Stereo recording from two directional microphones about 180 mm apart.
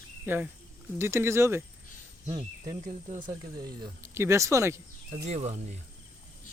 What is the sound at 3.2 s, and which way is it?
Speech, 25° right (ahead or behind).